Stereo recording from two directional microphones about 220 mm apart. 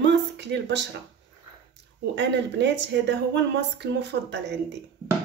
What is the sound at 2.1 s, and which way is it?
Speech, 55° right (ahead or behind).